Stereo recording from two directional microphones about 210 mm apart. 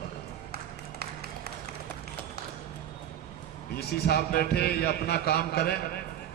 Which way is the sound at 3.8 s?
50° left (ahead or behind).